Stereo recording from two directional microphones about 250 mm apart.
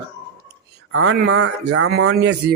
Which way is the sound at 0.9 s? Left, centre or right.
Right.